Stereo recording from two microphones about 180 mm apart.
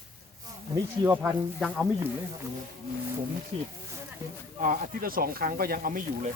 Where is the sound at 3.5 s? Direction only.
35° right (ahead or behind).